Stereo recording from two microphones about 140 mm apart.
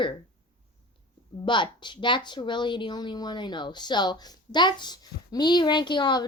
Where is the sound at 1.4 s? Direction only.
35° left (ahead or behind).